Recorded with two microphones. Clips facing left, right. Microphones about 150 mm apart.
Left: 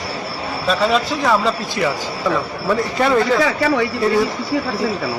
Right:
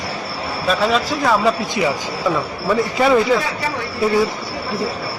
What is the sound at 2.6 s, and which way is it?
Speech, 5° right (ahead or behind).